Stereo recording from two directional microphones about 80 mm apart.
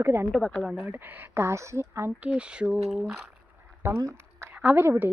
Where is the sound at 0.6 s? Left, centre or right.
Centre.